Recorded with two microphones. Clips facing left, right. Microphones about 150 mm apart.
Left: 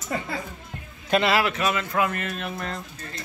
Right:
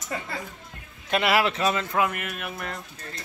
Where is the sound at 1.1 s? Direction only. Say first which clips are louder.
Left 2 dB; 10° right (ahead or behind).